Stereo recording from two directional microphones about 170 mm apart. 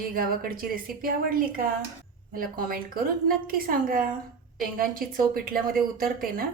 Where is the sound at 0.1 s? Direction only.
60° right (ahead or behind).